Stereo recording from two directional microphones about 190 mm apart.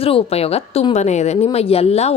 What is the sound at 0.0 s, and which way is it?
A woman's voice, 30° left (ahead or behind).